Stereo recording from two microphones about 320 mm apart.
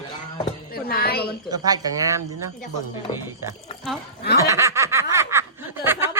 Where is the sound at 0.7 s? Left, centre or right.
Left.